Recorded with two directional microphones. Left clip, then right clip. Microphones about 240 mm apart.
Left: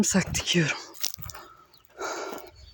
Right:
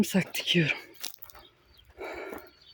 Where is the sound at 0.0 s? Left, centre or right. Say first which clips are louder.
Left 3 dB; centre.